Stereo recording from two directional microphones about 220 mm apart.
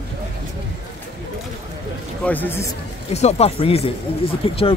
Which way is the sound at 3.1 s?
30° left (ahead or behind).